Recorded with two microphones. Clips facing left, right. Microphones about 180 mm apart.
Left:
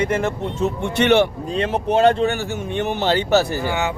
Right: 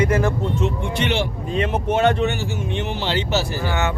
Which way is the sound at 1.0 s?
60° left (ahead or behind).